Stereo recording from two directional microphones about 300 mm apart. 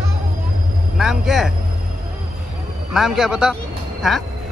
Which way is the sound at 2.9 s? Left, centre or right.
Centre.